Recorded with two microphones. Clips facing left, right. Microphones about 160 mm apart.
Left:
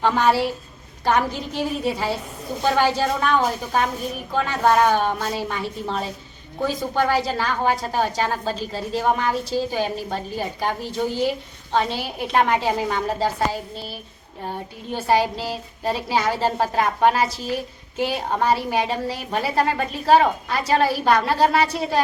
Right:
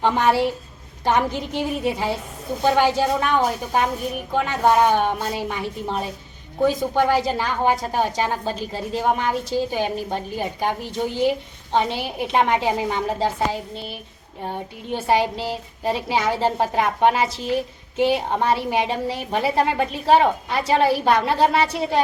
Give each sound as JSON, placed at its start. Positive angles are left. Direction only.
{"t": 0.0, "sound": "a woman's voice", "side_deg": -15}